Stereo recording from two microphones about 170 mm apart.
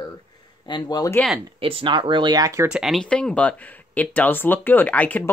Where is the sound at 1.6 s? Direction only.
30° right (ahead or behind).